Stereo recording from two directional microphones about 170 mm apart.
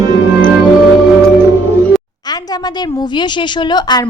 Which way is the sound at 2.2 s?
25° left (ahead or behind).